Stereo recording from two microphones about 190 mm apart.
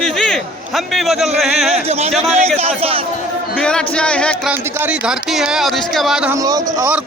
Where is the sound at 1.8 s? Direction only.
35° right (ahead or behind).